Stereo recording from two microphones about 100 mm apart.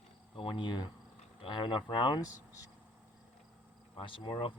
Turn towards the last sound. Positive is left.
turn(degrees=60)  # may be behind; listen again after turning